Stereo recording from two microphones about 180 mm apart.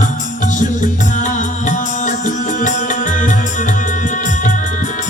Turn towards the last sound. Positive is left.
turn(degrees=45)  # may be behind; listen again after turning